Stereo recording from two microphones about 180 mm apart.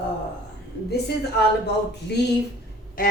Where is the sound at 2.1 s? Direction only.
65° left (ahead or behind).